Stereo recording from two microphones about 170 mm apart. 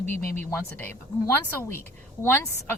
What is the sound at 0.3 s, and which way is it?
Speech, 10° left (ahead or behind).